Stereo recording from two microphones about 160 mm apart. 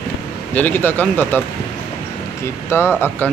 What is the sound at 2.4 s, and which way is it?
Speech, 15° left (ahead or behind).